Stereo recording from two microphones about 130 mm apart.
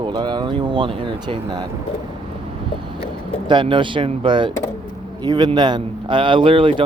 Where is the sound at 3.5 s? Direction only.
40° right (ahead or behind).